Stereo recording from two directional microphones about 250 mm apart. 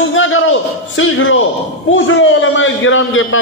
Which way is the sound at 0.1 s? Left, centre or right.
Left.